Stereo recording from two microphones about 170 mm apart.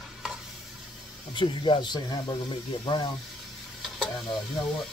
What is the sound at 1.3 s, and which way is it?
Speech, 30° left (ahead or behind).